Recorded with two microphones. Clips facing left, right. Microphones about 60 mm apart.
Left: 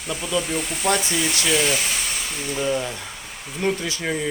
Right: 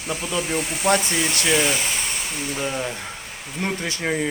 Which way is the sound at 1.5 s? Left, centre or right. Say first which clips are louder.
Right 1 dB; right.